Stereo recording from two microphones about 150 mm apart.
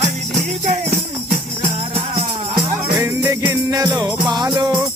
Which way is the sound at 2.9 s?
15° right (ahead or behind).